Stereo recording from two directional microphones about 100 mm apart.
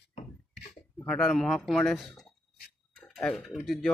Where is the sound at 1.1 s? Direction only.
10° left (ahead or behind).